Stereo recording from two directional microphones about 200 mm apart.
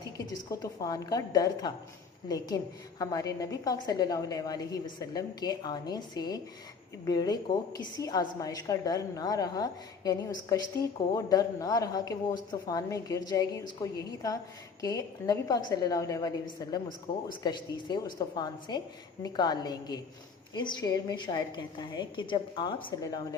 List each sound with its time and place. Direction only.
0.6 s a woman's voice: 20° left (ahead or behind)
3.0 s a woman's voice: 15° left (ahead or behind)